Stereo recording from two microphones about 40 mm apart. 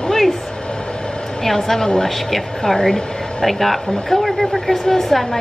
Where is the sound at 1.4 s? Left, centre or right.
Centre.